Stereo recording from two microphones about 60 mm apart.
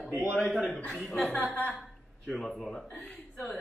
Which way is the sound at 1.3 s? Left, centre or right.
Left.